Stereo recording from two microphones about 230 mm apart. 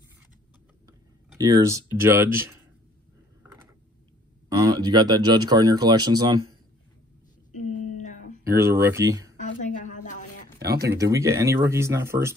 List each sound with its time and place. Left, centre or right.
1.4 s speech: centre
4.5 s speech: centre
7.5 s a sound: left
8.5 s speech: centre
9.4 s a sound: left
10.6 s speech: right
11.0 s speech: centre